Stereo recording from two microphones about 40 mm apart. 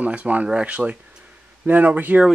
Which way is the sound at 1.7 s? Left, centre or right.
Right.